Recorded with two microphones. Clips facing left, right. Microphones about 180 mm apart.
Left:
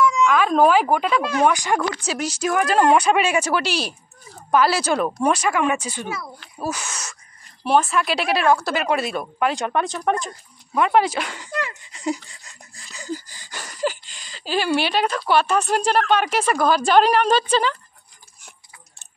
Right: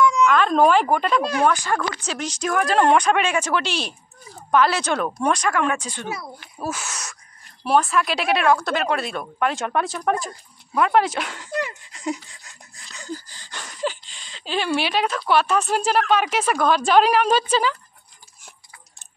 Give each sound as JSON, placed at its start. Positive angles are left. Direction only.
{"t": 0.0, "sound": "cat", "side_deg": 0}
{"t": 1.4, "sound": "a woman's voice", "side_deg": 15}
{"t": 6.0, "sound": "speech", "side_deg": -20}
{"t": 6.6, "sound": "a woman's voice", "side_deg": 0}